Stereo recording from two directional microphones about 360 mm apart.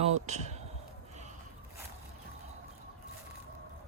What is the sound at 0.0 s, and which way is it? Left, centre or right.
Speech, centre.